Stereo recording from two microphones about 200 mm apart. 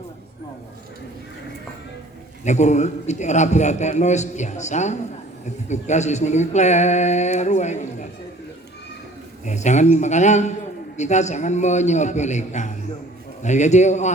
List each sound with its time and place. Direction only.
2.4 s a man's voice: 35° left (ahead or behind)
9.5 s a man's voice: 35° left (ahead or behind)